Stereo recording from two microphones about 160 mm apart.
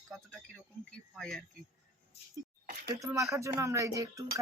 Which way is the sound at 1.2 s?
5° left (ahead or behind).